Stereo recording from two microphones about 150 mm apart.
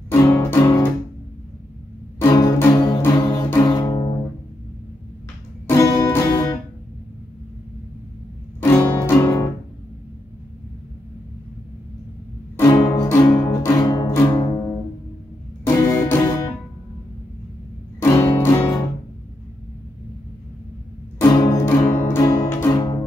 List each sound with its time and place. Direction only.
0.1 s music: 20° left (ahead or behind)
2.1 s music: 20° left (ahead or behind)
5.7 s music: 20° left (ahead or behind)
8.5 s music: 15° left (ahead or behind)
12.5 s music: 20° left (ahead or behind)
18.0 s music: 20° left (ahead or behind)
21.2 s music: 30° left (ahead or behind)
21.5 s music: 15° left (ahead or behind)